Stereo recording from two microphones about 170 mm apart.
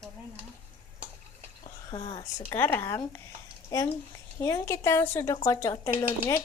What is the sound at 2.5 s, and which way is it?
A woman's voice, 15° left (ahead or behind).